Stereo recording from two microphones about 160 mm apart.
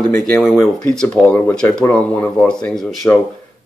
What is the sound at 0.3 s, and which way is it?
Speech, centre (ahead or behind).